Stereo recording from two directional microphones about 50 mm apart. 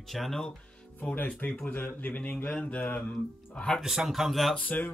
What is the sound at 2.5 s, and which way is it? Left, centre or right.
Mantra, left.